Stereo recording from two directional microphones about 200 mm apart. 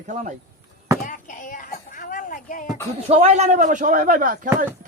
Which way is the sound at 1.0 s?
40° left (ahead or behind).